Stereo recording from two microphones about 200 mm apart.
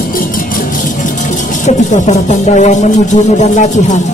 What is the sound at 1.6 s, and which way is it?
Speech, 35° left (ahead or behind).